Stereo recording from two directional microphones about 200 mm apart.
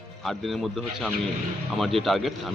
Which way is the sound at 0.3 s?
Centre (ahead or behind).